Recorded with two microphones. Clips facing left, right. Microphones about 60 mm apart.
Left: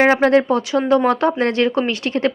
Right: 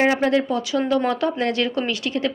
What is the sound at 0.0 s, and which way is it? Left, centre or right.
A woman's voice, left.